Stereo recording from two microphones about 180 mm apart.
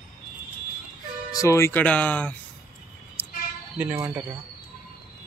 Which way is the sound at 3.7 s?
15° right (ahead or behind).